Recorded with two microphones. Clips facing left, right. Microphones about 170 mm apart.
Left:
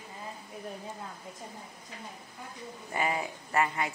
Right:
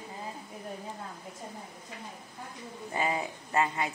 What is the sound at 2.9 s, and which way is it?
Speech, 20° right (ahead or behind).